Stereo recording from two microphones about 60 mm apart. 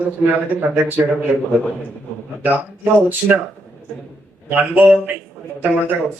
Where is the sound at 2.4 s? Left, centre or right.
Right.